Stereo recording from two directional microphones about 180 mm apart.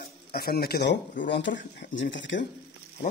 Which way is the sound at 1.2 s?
85° left.